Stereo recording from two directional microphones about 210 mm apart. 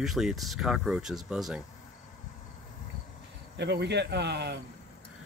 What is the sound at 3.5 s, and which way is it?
Speech, 55° right (ahead or behind).